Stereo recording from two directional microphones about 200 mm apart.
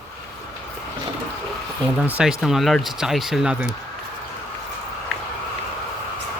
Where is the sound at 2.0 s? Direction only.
5° right (ahead or behind).